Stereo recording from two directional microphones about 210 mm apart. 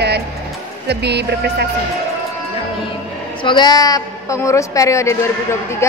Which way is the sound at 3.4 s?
20° left (ahead or behind).